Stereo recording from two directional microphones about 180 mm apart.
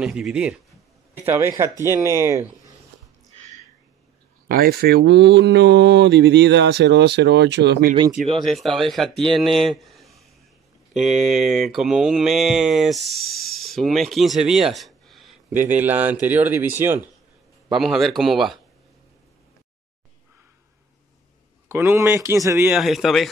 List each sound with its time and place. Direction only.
0.0 s speech: 5° right (ahead or behind)
4.5 s speech: 55° right (ahead or behind); by 7.9 s 70° right (ahead or behind)
8.4 s speech: centre (ahead or behind)
9.4 s a sound: centre (ahead or behind)
10.9 s speech: centre (ahead or behind)
15.5 s speech: 10° right (ahead or behind)
17.6 s speech: centre (ahead or behind)
21.6 s speech: 15° right (ahead or behind)
22.8 s speech: centre (ahead or behind)